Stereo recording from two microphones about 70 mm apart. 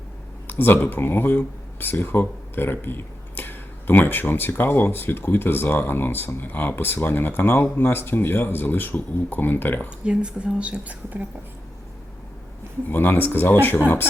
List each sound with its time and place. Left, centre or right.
0.4 s speech: left
10.0 s speech: centre
12.9 s speech: left